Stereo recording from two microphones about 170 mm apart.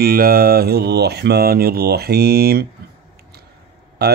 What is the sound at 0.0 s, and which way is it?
Speech, 60° right (ahead or behind).